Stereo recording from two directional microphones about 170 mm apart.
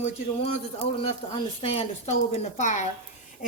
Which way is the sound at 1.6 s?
35° left (ahead or behind).